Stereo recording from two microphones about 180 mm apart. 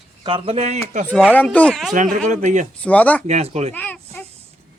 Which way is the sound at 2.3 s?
40° right (ahead or behind).